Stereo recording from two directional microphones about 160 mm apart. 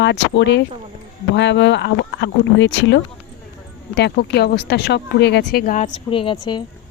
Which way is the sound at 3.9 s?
90° left.